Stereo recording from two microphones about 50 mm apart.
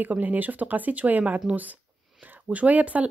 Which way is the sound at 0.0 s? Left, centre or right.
Right.